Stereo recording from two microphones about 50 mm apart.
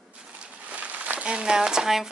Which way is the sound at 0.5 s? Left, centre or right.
Right.